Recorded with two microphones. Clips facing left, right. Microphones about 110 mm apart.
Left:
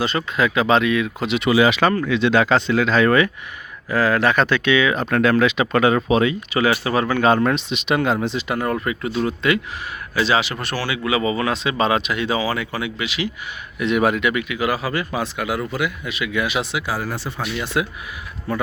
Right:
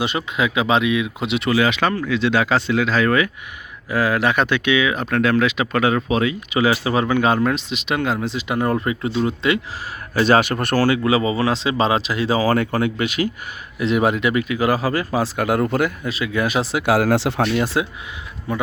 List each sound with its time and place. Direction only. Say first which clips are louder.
0.0 s speech: left 1 dB; 15° right (ahead or behind)
1.5 s speech: left 3 dB; 10° left (ahead or behind)
1.8 s speech: left 2 dB; centre (ahead or behind)
3.8 s speech: left 1 dB; 15° right (ahead or behind)
6.5 s speech: right 4 dB; 20° right (ahead or behind); by 8.4 s 5° right (ahead or behind)
8.4 s speech: right 2 dB; 20° right (ahead or behind)
10.2 s speech: right 4 dB; 50° right (ahead or behind); by 12.5 s 35° right (ahead or behind)
12.5 s speech: right 6 dB; 50° right (ahead or behind)
13.7 s speech: even; 30° right (ahead or behind)
16.8 s speech: right 9 dB; 80° right
17.7 s speech: right 1 dB; 25° right (ahead or behind)